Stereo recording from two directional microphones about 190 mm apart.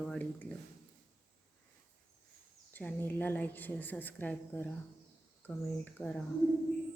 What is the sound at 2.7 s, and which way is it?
A woman's voice, 10° left (ahead or behind).